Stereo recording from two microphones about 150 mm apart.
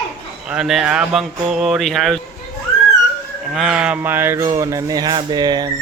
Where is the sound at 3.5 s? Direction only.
5° right (ahead or behind); by 5.7 s 30° right (ahead or behind).